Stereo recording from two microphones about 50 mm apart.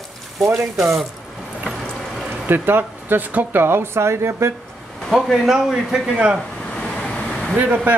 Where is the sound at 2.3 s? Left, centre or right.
Right.